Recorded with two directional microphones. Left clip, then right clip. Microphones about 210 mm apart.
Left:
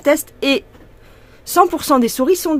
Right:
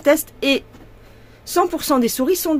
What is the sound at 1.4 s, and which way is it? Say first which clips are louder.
Speech: left 5 dB; 30° left (ahead or behind).